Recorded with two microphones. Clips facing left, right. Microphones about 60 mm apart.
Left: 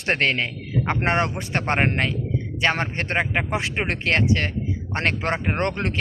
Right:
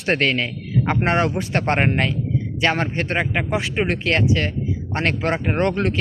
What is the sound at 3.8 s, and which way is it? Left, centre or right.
Speech, left.